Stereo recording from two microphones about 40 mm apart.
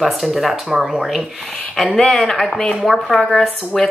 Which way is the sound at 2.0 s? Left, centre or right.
Centre.